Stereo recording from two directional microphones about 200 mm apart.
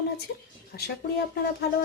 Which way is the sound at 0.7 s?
50° left (ahead or behind).